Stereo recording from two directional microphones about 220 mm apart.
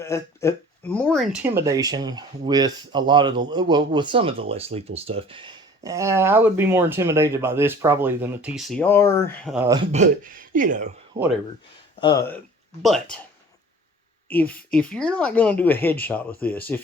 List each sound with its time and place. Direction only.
0.0 s speech: 15° left (ahead or behind)
9.6 s speech: 20° right (ahead or behind)
9.9 s speech: 35° right (ahead or behind)
11.9 s speech: 20° left (ahead or behind)
12.8 s speech: centre (ahead or behind)
14.3 s speech: 5° left (ahead or behind)